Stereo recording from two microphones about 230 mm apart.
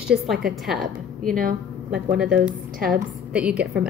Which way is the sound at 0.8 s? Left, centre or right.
Right.